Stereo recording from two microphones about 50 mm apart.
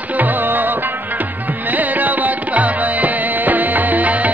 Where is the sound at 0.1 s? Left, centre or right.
Right.